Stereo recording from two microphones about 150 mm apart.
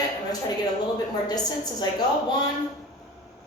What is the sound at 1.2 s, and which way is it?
Speech, 25° left (ahead or behind).